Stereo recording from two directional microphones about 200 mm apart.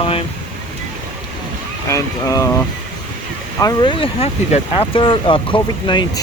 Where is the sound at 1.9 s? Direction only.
15° left (ahead or behind).